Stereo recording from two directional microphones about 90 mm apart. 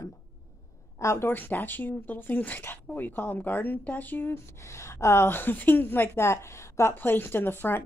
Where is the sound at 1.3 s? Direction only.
20° left (ahead or behind).